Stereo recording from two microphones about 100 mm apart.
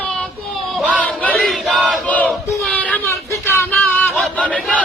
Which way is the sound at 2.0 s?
15° left (ahead or behind).